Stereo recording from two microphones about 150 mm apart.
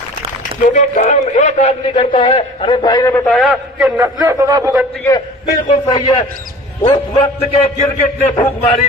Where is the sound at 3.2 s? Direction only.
Centre (ahead or behind).